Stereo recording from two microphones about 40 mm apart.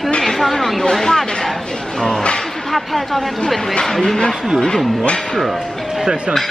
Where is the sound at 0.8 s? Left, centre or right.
Centre.